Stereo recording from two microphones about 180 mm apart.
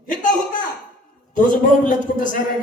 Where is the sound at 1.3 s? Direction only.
45° left (ahead or behind).